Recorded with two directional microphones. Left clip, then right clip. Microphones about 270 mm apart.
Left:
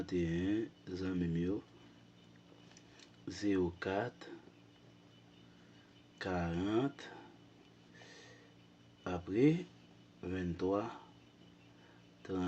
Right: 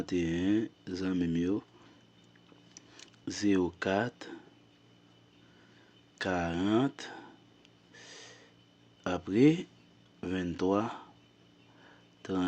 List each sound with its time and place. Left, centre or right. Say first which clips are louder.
0.0 s speech: right 5 dB; right
2.7 s speech: right 6 dB; right
6.1 s speech: right 7 dB; right
7.9 s a sound: right 7 dB; right
9.0 s speech: right 6 dB; right
12.2 s speech: right 6 dB; right